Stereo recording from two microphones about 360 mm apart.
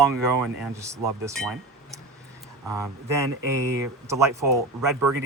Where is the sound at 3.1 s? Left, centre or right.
Centre.